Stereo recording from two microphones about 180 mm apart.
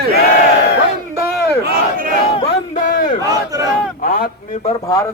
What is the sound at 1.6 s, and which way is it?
Battle cry, 55° right (ahead or behind).